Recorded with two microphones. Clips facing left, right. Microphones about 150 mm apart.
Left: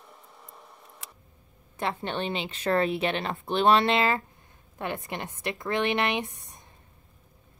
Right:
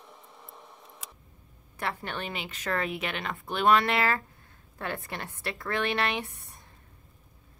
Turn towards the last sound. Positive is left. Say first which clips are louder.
# left 3 dB
turn(degrees=20)  # may be behind; listen again after turning